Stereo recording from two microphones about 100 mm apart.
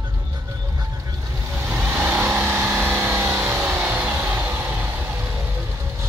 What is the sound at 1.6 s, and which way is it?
Vehicle, 20° right (ahead or behind).